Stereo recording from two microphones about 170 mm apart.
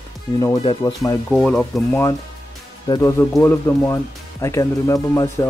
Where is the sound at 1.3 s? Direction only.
5° left (ahead or behind).